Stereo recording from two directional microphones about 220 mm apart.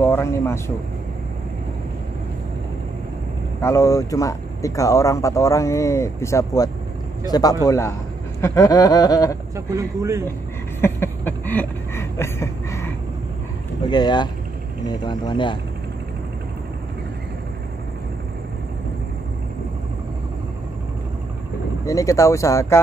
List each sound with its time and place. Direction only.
0.0 s speech: 10° left (ahead or behind)
3.6 s speech: 15° left (ahead or behind)
9.7 s speech: 15° right (ahead or behind)
10.8 s a sound: 10° left (ahead or behind)
13.8 s speech: 20° left (ahead or behind)
21.8 s speech: 15° left (ahead or behind)